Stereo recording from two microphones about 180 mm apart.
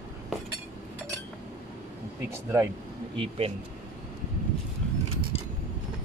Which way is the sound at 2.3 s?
15° right (ahead or behind).